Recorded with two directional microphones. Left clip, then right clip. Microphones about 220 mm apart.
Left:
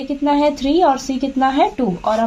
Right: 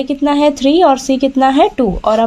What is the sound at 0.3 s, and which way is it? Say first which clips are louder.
A woman's voice: right 4 dB; 40° right (ahead or behind).